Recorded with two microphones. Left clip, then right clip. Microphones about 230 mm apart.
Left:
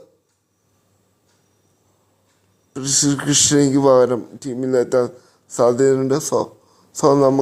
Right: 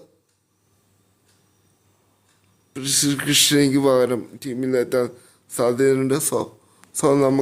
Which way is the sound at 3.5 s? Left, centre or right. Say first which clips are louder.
Left 2 dB; centre.